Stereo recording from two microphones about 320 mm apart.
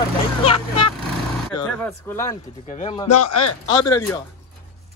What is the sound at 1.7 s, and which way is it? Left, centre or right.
Speech, centre.